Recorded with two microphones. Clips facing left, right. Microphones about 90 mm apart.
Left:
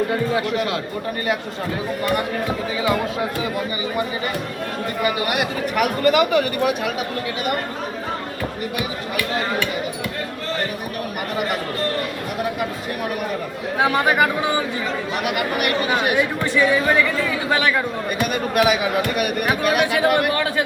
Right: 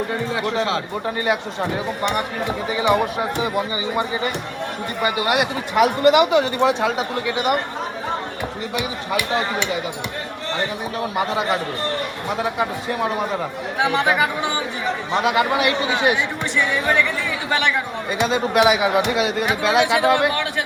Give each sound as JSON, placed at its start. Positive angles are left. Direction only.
{"t": 0.3, "sound": "speech", "side_deg": -25}
{"t": 5.0, "sound": "speech", "side_deg": -25}
{"t": 8.7, "sound": "speech", "side_deg": -20}
{"t": 11.2, "sound": "speech", "side_deg": -20}
{"t": 14.8, "sound": "speech", "side_deg": -20}
{"t": 16.1, "sound": "speech", "side_deg": 10}
{"t": 18.2, "sound": "speech", "side_deg": -25}